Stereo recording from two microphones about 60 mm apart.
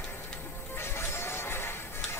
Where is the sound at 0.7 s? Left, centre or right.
Left.